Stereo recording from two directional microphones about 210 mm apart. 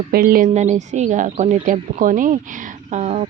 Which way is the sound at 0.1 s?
45° right (ahead or behind).